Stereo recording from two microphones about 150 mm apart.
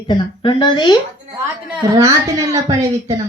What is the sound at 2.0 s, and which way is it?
A woman's voice, 20° right (ahead or behind).